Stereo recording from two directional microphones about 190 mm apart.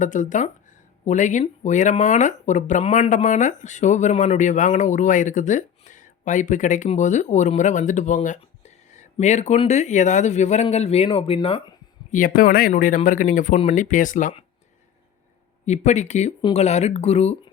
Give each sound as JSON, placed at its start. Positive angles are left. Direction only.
{"t": 0.0, "sound": "speech", "side_deg": 40}
{"t": 12.1, "sound": "speech", "side_deg": 45}
{"t": 15.6, "sound": "speech", "side_deg": 35}